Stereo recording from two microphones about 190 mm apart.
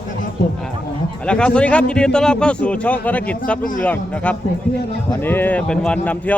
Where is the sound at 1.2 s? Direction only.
5° left (ahead or behind).